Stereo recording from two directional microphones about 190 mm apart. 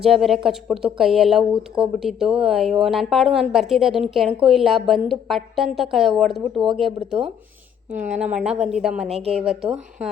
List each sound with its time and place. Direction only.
0.0 s speech: centre (ahead or behind)
7.9 s speech: 40° right (ahead or behind)
8.4 s speech: 5° right (ahead or behind)